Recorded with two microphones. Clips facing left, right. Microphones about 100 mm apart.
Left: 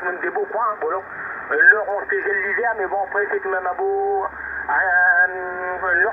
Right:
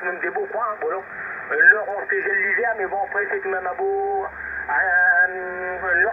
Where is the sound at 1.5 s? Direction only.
40° left (ahead or behind).